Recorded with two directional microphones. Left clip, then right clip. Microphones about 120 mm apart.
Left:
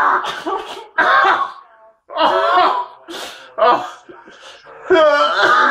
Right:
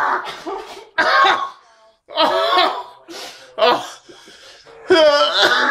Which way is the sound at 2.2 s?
75° right (ahead or behind).